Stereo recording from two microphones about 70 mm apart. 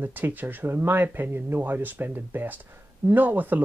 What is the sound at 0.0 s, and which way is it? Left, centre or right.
Speech, right.